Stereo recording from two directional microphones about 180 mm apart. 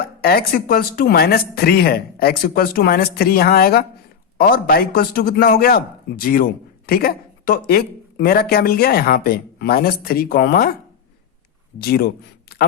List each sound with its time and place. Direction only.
0.0 s a man's voice: 55° left (ahead or behind)
11.8 s speech: 60° left (ahead or behind)